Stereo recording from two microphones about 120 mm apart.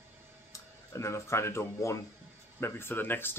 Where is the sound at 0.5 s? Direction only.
25° left (ahead or behind).